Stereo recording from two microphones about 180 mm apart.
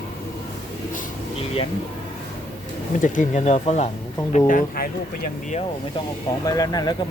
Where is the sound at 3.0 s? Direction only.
45° left (ahead or behind).